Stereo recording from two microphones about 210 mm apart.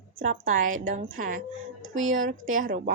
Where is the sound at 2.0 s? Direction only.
70° right (ahead or behind).